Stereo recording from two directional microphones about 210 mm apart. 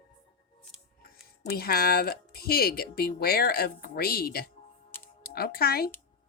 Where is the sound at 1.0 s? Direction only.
45° left (ahead or behind).